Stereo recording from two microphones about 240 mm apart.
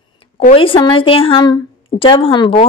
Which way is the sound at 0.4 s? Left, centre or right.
Left.